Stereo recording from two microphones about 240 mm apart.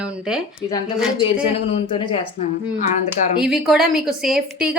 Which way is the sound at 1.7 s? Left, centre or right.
Left.